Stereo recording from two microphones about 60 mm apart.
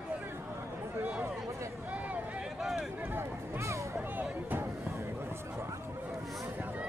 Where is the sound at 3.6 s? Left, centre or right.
Right.